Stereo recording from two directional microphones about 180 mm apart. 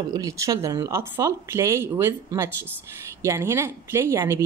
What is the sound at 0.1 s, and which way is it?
Speech, 20° right (ahead or behind).